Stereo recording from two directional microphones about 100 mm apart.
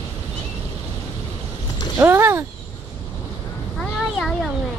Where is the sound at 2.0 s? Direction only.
25° right (ahead or behind).